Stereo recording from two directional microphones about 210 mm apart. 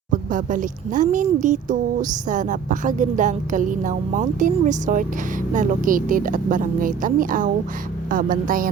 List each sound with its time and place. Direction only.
0.1 s speech: 40° right (ahead or behind)